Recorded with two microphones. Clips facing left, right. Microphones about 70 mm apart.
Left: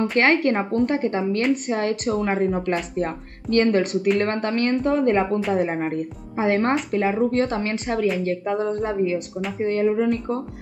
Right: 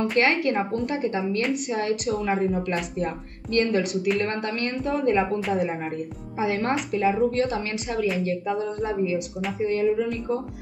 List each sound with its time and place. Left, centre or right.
0.2 s speech: left